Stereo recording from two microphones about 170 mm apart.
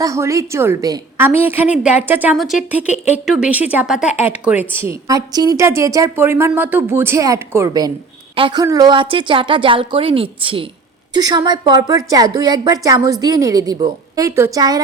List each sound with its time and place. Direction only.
0.0 s speech: 20° right (ahead or behind)
2.3 s a woman's voice: centre (ahead or behind); by 14.8 s 20° right (ahead or behind)